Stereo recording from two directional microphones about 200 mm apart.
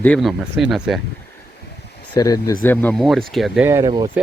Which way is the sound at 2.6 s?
5° left (ahead or behind).